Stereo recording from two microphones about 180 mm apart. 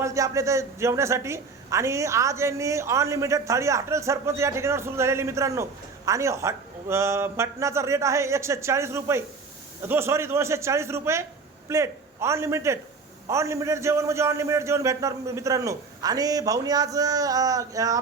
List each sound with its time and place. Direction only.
0.0 s a man's voice: 15° right (ahead or behind)